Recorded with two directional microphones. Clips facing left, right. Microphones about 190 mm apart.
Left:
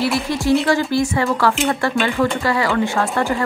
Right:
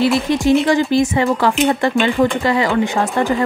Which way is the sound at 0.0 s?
20° right (ahead or behind).